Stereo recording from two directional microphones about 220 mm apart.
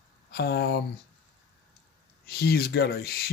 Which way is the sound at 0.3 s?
45° left (ahead or behind).